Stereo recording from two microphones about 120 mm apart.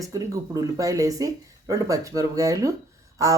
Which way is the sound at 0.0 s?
30° right (ahead or behind).